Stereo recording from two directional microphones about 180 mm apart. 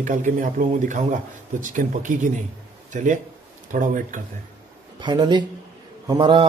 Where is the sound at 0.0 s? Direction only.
45° right (ahead or behind).